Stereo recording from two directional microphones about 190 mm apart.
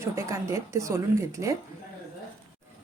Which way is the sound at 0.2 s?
15° right (ahead or behind).